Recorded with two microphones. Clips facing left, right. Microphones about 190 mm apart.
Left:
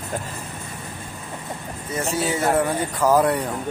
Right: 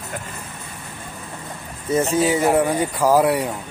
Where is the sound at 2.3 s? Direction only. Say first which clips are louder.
Right 3 dB; 15° right (ahead or behind).